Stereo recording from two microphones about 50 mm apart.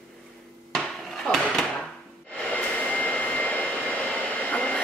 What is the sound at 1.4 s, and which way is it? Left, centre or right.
Drawer open or close, centre.